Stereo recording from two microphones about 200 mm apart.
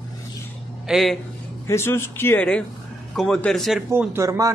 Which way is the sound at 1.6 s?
10° left (ahead or behind).